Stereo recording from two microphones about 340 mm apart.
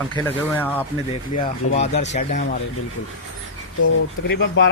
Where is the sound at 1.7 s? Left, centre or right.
Centre.